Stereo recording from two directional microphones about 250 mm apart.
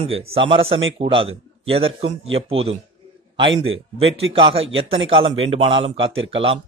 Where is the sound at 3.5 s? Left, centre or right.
Right.